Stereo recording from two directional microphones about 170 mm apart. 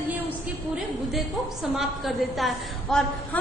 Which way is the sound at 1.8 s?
Centre (ahead or behind).